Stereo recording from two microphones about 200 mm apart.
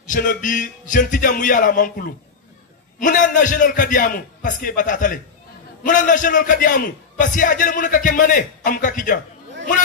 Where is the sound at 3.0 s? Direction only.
40° left (ahead or behind).